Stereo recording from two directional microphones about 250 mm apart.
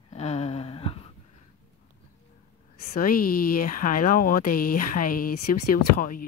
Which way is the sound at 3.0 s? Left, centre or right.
Left.